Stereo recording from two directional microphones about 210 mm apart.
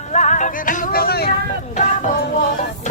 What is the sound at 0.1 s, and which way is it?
Music, 35° left (ahead or behind).